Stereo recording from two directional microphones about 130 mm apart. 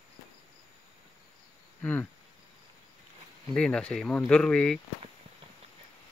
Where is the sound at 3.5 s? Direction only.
10° left (ahead or behind).